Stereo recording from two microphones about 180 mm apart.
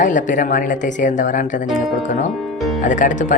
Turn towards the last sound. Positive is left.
turn(degrees=45)  # may be behind; listen again after turning